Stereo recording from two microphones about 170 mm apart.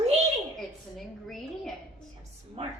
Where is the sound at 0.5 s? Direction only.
Centre (ahead or behind).